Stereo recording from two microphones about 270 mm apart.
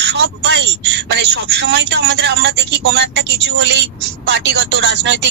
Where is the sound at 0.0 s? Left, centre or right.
Right.